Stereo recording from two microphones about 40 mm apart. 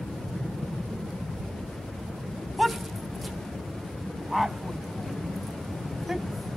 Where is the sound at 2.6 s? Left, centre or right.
Centre.